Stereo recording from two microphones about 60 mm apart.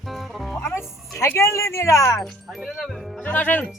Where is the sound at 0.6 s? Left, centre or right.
Left.